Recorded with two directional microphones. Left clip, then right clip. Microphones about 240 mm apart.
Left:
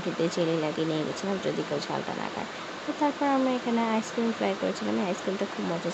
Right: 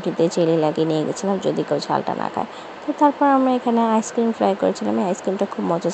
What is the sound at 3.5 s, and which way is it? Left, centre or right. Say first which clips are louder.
Speech: right 9 dB; right.